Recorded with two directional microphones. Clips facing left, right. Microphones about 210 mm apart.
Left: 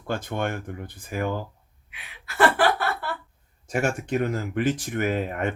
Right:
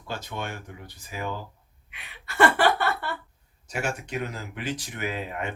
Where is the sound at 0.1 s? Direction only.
50° left (ahead or behind).